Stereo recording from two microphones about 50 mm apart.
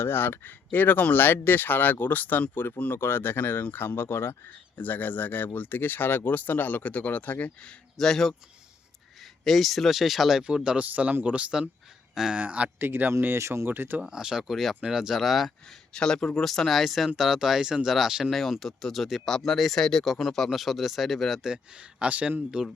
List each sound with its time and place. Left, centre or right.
0.0 s speech: left
2.9 s speech: left
4.8 s speech: left
7.9 s speech: centre
9.4 s speech: centre
10.4 s speech: centre
10.8 s speech: right
12.8 s speech: right
13.7 s speech: right
14.0 s speech: centre
14.5 s speech: centre
14.8 s speech: centre
15.9 s speech: centre
21.5 s speech: centre